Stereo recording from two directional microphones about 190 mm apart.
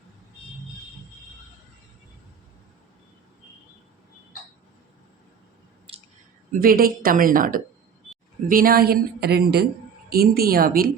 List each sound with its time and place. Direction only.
5.9 s clicking: 30° right (ahead or behind)
6.5 s speech: 50° right (ahead or behind)